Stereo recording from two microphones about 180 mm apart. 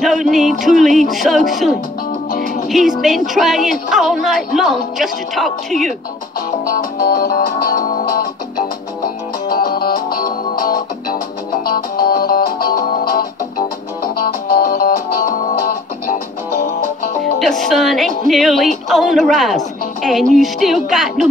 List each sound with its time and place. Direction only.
0.0 s music: centre (ahead or behind)
0.7 s speech: centre (ahead or behind)
2.3 s music: 50° left (ahead or behind)
2.7 s speech: centre (ahead or behind)
6.6 s music: 50° left (ahead or behind)
14.1 s music: 60° left (ahead or behind)
17.2 s music: centre (ahead or behind)